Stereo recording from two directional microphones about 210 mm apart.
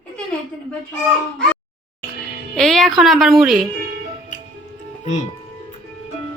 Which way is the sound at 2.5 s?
Centre (ahead or behind).